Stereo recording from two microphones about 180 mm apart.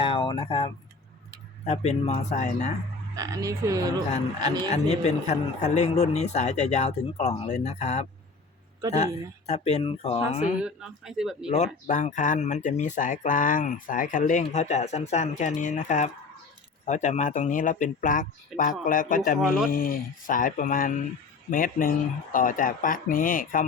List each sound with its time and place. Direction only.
0.0 s a sound: 30° left (ahead or behind)
1.6 s a man's voice: 35° left (ahead or behind)
3.2 s frog: 20° right (ahead or behind)
4.7 s a man's voice: 40° left (ahead or behind)
9.5 s a man's voice: 35° left (ahead or behind)
10.6 s speech: 5° right (ahead or behind)
11.5 s speech: 40° left (ahead or behind)
19.4 s speech: centre (ahead or behind)
19.7 s speech: 50° left (ahead or behind)